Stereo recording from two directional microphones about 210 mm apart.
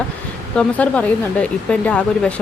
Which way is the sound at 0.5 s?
5° left (ahead or behind).